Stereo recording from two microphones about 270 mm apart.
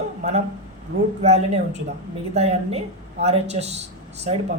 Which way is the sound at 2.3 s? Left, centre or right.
Right.